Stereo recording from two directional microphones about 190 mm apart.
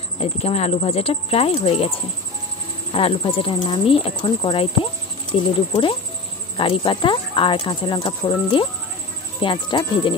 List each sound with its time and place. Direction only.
0.2 s speech: 35° left (ahead or behind)